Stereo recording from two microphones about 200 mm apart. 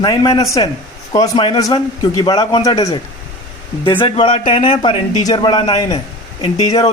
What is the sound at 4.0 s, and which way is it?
A man's voice, 25° left (ahead or behind).